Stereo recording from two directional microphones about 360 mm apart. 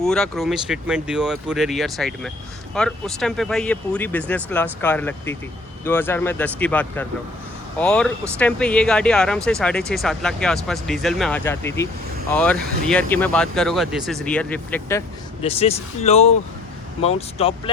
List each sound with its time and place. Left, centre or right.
0.0 s speech: centre